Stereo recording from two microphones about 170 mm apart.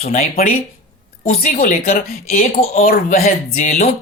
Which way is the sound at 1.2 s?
50° left (ahead or behind).